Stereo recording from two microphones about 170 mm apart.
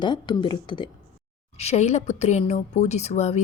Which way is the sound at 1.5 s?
40° left (ahead or behind).